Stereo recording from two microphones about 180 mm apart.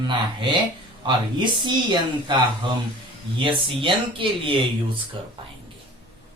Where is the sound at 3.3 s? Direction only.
30° right (ahead or behind).